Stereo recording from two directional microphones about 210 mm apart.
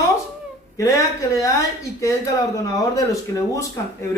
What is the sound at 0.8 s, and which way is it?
Speech, 15° left (ahead or behind).